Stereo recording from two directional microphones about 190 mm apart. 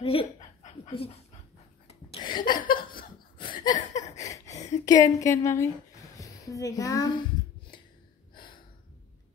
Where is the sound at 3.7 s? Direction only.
40° left (ahead or behind).